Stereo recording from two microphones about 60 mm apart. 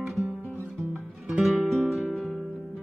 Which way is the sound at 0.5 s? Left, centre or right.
Right.